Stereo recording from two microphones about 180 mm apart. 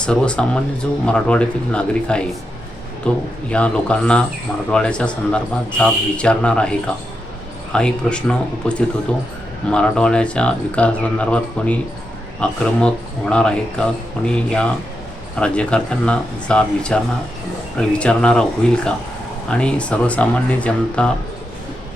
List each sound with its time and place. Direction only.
0.0 s speech: 5° left (ahead or behind)